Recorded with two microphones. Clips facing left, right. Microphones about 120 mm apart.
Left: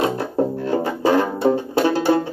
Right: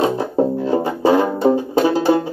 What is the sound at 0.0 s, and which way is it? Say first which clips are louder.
Music: right 3 dB; 15° right (ahead or behind).